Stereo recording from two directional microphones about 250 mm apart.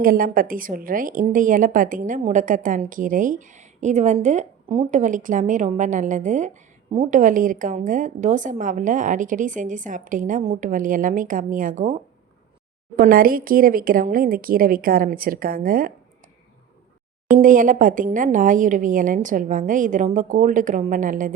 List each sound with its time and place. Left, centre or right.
0.0 s a woman's voice: right
13.0 s a woman's voice: right
17.3 s a woman's voice: right